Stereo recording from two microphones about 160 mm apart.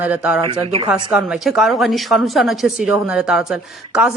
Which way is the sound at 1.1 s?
5° right (ahead or behind).